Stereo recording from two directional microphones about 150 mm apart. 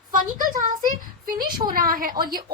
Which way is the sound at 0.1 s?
65° right (ahead or behind).